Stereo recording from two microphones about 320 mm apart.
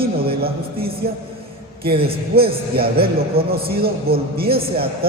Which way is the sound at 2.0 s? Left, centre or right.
Centre.